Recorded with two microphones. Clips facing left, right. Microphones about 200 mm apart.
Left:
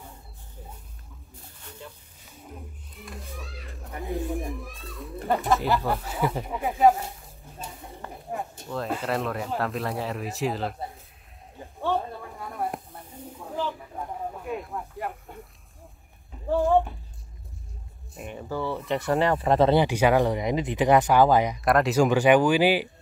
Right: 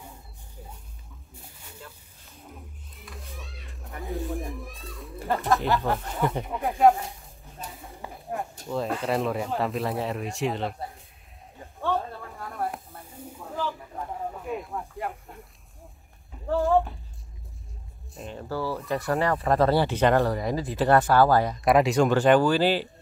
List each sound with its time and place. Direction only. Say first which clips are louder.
2.2 s a sound: left 3 dB; centre (ahead or behind)
7.6 s bird: even; centre (ahead or behind)
8.6 s speech: right 2 dB; centre (ahead or behind)
11.6 s a sound: left 1 dB; 15° left (ahead or behind)
12.9 s snake: left 1 dB; 5° left (ahead or behind)
16.6 s speech: left 1 dB; centre (ahead or behind)
18.3 s speech: even; 15° left (ahead or behind)
18.7 s speech: left 2 dB; centre (ahead or behind)
19.5 s speech: left 2 dB; 20° left (ahead or behind)
21.5 s speech: right 1 dB; centre (ahead or behind)
22.1 s speech: left 1 dB; 15° left (ahead or behind)